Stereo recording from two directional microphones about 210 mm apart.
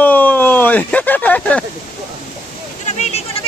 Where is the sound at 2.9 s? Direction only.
30° left (ahead or behind).